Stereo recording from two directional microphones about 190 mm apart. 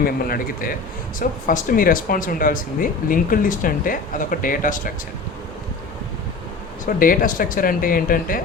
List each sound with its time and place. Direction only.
0.0 s speech: 50° left (ahead or behind)
6.8 s speech: 45° left (ahead or behind)